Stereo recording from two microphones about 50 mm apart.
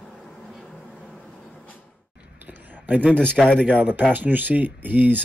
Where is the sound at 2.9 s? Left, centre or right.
Right.